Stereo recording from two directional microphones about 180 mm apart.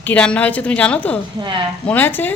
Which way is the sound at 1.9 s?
10° left (ahead or behind).